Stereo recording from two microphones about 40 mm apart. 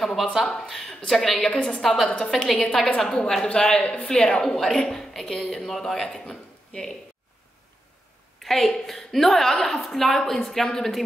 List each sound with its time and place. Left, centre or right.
0.0 s a woman's voice: centre
1.5 s a man's voice: left
1.8 s a woman's voice: centre; by 3.8 s left
3.8 s speech: left
4.1 s a woman's voice: centre
8.4 s a woman's voice: centre